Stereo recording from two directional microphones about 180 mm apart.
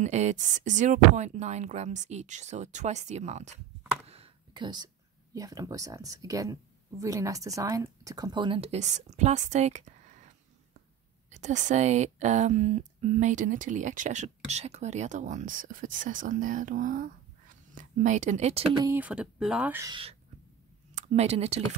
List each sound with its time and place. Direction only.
0.0 s a woman's voice: 40° right (ahead or behind)
4.0 s computer keyboard: 35° right (ahead or behind)
5.3 s a woman's voice: 20° right (ahead or behind)
18.9 s speech: 10° right (ahead or behind)
19.9 s a woman's voice: 30° right (ahead or behind)